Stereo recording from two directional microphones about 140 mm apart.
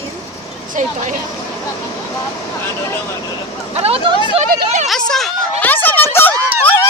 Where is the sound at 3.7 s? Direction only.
45° right (ahead or behind).